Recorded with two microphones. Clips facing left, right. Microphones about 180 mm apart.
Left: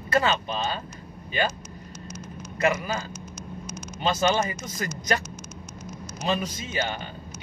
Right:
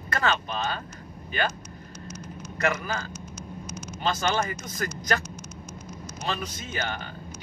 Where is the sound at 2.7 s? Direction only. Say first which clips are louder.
Left 2 dB; 20° left (ahead or behind).